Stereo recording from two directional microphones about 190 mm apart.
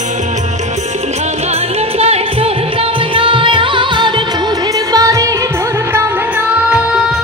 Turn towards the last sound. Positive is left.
turn(degrees=-15)  # may be behind; listen again after turning